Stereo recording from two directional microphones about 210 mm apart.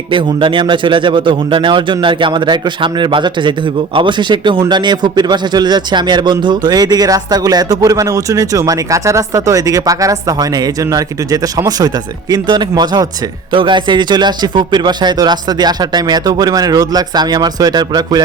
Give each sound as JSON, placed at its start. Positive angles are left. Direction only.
{"t": 0.1, "sound": "a man's voice", "side_deg": -25}